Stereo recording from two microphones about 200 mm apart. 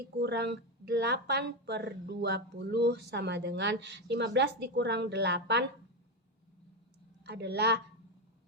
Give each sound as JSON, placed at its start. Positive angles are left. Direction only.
{"t": 0.2, "sound": "speech", "side_deg": -55}
{"t": 7.3, "sound": "speech", "side_deg": -55}